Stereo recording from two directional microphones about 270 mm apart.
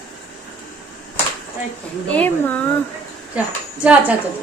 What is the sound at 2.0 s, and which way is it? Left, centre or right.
Speech, centre.